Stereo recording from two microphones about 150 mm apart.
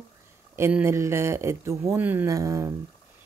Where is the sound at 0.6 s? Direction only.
15° right (ahead or behind).